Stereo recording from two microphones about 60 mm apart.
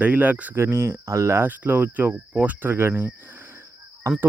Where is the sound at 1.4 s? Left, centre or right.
Right.